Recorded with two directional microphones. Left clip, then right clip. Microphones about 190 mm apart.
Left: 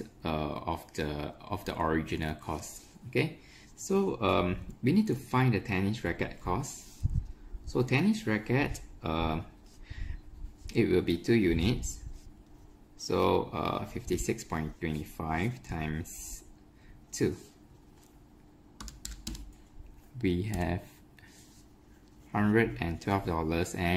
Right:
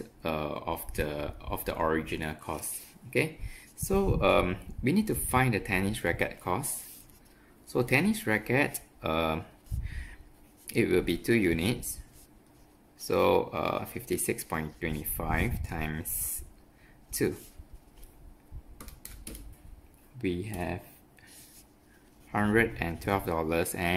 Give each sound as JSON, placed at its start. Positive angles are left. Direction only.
{"t": 0.0, "sound": "speech", "side_deg": -5}
{"t": 3.8, "sound": "speech", "side_deg": -15}
{"t": 7.7, "sound": "speech", "side_deg": -15}
{"t": 10.7, "sound": "speech", "side_deg": -15}
{"t": 13.0, "sound": "speech", "side_deg": -15}
{"t": 20.2, "sound": "speech", "side_deg": 5}
{"t": 22.3, "sound": "speech", "side_deg": -10}